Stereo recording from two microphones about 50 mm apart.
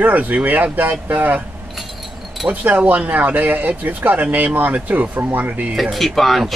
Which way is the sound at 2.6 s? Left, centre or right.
Right.